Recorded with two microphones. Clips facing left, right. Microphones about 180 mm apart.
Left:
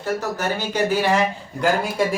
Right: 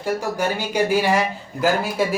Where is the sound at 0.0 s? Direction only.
10° right (ahead or behind).